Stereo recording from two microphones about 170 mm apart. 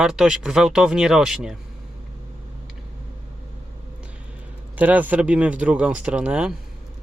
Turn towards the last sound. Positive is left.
turn(degrees=-5)  # may be behind; listen again after turning